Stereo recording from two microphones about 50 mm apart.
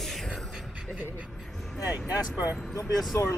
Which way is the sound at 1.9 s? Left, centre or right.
Right.